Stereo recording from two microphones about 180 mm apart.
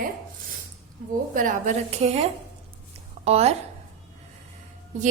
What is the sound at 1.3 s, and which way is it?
A woman's voice, 45° right (ahead or behind).